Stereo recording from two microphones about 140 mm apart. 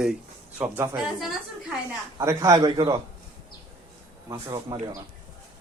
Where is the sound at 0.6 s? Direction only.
15° right (ahead or behind).